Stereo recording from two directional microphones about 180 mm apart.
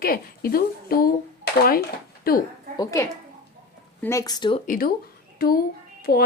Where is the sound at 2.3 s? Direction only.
55° left (ahead or behind).